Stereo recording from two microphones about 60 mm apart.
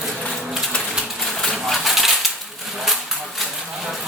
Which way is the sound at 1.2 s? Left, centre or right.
Centre.